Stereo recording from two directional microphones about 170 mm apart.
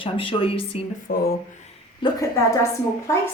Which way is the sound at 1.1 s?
60° left (ahead or behind).